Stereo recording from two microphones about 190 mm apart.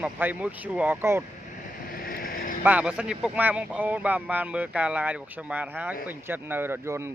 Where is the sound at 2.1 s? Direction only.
50° left (ahead or behind).